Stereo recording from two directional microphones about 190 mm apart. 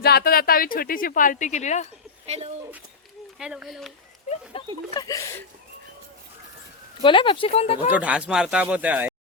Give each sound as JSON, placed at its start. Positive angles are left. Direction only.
{"t": 0.0, "sound": "speech", "side_deg": 55}
{"t": 2.2, "sound": "speech", "side_deg": -35}
{"t": 3.3, "sound": "speech", "side_deg": -5}
{"t": 4.5, "sound": "speech", "side_deg": 30}
{"t": 4.9, "sound": "speech", "side_deg": 15}
{"t": 7.0, "sound": "speech", "side_deg": 25}
{"t": 7.9, "sound": "speech", "side_deg": -5}